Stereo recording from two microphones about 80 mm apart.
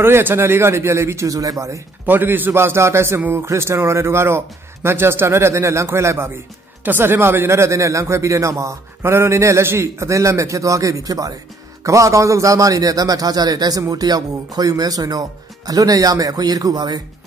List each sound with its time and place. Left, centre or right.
0.0 s speech: right
2.0 s a man's voice: right